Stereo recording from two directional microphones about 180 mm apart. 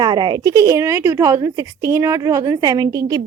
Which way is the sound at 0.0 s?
25° right (ahead or behind).